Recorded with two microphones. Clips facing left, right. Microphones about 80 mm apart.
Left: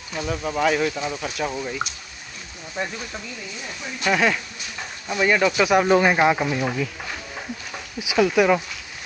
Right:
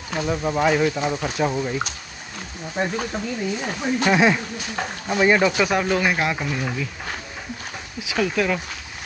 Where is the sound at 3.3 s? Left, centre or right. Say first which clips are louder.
Right 9 dB; right.